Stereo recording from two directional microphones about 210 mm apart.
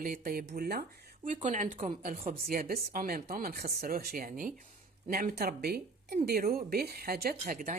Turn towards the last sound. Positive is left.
turn(degrees=-40)  # may be behind; listen again after turning